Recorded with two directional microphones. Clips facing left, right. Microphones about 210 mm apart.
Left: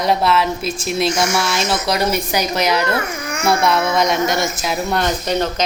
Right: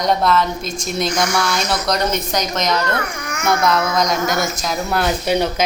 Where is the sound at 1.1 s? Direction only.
25° left (ahead or behind).